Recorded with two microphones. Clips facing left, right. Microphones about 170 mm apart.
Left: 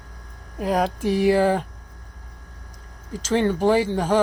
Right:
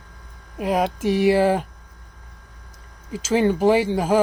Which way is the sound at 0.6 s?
5° right (ahead or behind).